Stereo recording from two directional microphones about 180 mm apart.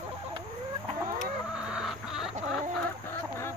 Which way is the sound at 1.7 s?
5° right (ahead or behind).